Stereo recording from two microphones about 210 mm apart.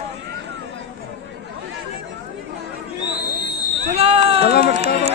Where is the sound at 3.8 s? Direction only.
30° right (ahead or behind).